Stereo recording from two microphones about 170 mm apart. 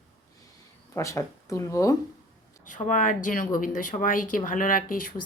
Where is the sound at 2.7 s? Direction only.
50° left (ahead or behind).